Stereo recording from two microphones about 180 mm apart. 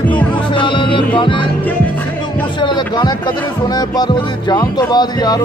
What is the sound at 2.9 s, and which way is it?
Speech, 25° left (ahead or behind).